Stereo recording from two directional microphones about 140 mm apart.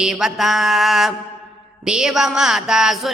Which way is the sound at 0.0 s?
5° right (ahead or behind).